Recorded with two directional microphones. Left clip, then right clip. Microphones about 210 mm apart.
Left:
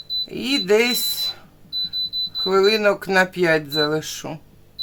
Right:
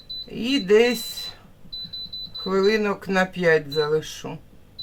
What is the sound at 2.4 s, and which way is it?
Speech, 45° left (ahead or behind).